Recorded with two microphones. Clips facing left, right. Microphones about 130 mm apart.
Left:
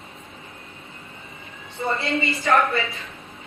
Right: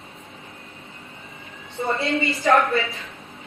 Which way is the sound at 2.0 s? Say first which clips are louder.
Right 1 dB; centre (ahead or behind).